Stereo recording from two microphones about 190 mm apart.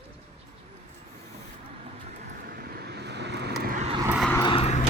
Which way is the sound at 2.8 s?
60° right (ahead or behind).